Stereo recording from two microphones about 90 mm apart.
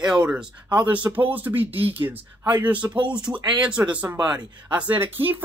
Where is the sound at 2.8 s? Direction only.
60° right (ahead or behind).